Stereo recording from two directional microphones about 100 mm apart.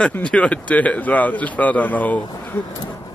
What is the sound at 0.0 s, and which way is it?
Speech, 10° left (ahead or behind).